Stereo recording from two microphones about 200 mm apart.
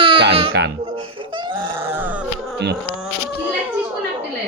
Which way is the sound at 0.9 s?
25° right (ahead or behind).